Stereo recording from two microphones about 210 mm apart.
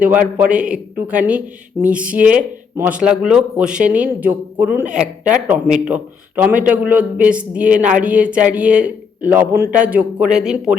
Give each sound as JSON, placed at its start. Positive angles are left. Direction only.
{"t": 0.0, "sound": "a man's voice", "side_deg": -5}